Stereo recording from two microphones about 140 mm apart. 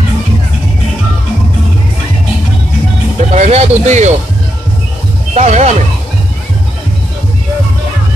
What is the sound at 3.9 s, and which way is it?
Speech, 55° right (ahead or behind).